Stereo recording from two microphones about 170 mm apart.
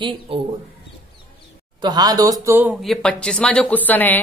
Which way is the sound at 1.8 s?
25° right (ahead or behind).